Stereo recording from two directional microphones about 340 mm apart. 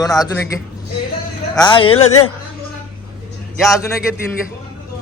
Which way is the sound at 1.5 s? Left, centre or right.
Centre.